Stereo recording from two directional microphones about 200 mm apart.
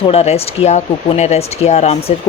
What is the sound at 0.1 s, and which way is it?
Speech, 30° left (ahead or behind).